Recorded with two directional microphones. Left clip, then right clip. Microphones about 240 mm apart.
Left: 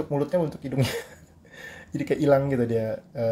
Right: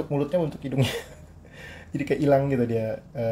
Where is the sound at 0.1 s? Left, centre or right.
Centre.